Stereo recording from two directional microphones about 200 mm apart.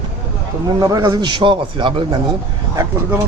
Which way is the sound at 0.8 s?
15° right (ahead or behind).